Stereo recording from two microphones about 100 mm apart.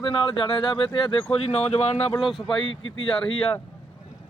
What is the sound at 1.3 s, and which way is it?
Speech, 90° left.